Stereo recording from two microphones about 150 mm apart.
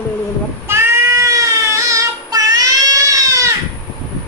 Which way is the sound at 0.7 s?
15° right (ahead or behind).